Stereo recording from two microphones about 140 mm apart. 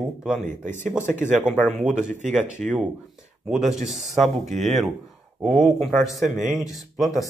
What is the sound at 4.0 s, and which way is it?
Speech, 55° right (ahead or behind).